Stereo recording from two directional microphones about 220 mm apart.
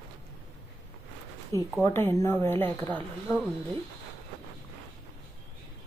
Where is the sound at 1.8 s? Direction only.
10° left (ahead or behind).